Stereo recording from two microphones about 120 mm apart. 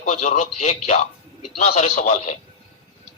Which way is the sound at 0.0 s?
75° left (ahead or behind).